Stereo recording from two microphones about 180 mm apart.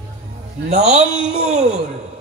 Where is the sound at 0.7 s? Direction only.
40° right (ahead or behind).